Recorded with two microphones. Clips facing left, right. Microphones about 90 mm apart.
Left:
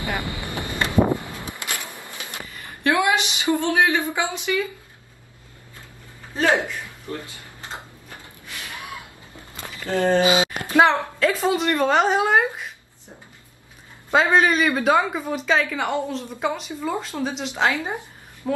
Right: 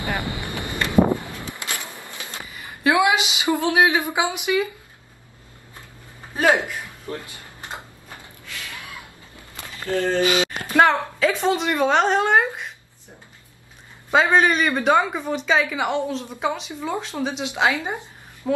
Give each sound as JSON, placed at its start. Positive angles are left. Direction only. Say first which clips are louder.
{"t": 0.0, "sound": "wind noise", "louder": "right 1 dB", "side_deg": -20}
{"t": 1.3, "sound": "a sound", "louder": "even", "side_deg": 20}
{"t": 2.8, "sound": "a sound", "louder": "right 2 dB", "side_deg": -15}
{"t": 3.6, "sound": "speech", "louder": "right 3 dB", "side_deg": -15}
{"t": 6.3, "sound": "speech", "louder": "right 1 dB", "side_deg": -15}
{"t": 7.3, "sound": "tick-tock", "louder": "right 1 dB", "side_deg": -20}
{"t": 8.5, "sound": "gasp", "louder": "left 1 dB", "side_deg": 20}
{"t": 9.6, "sound": "a sound", "louder": "left 1 dB", "side_deg": 20}
{"t": 10.8, "sound": "a woman's voice", "louder": "even", "side_deg": 0}
{"t": 14.1, "sound": "a woman's voice", "louder": "even", "side_deg": 0}